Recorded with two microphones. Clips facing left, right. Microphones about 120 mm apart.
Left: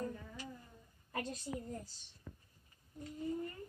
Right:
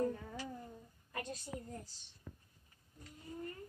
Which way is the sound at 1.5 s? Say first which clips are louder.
Left 3 dB; 5° left (ahead or behind).